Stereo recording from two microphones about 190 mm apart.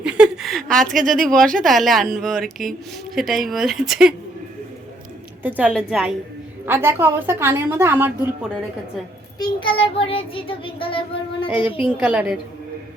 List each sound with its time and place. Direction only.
0.0 s a sound: 5° right (ahead or behind)
1.2 s speech: 5° left (ahead or behind)
5.4 s a woman's voice: 10° right (ahead or behind)
6.7 s a woman's voice: 10° right (ahead or behind)
9.4 s child singing: 25° left (ahead or behind)
11.8 s speech: 5° right (ahead or behind)